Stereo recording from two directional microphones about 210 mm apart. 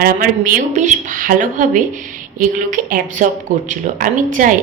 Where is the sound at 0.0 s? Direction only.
40° right (ahead or behind).